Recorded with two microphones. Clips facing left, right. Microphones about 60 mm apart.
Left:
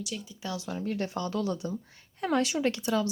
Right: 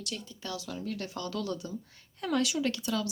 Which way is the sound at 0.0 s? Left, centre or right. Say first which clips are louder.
Left 3 dB; centre.